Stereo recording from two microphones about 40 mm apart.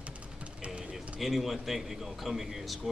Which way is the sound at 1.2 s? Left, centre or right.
Centre.